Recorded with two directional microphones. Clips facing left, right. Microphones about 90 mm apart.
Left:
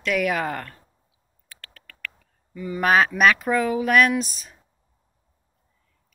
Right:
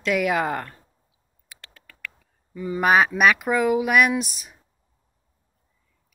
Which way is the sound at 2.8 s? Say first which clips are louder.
Even; 10° right (ahead or behind).